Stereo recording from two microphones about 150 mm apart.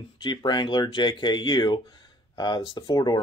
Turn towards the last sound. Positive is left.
turn(degrees=25)  # may be behind; listen again after turning